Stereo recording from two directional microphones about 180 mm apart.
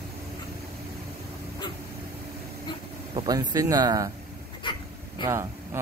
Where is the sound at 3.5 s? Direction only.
20° right (ahead or behind).